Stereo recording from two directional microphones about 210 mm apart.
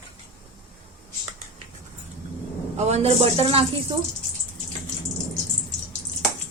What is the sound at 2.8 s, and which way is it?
Speech, 30° right (ahead or behind).